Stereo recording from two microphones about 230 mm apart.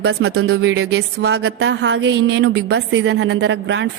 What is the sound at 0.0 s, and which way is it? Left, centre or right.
Speech, right.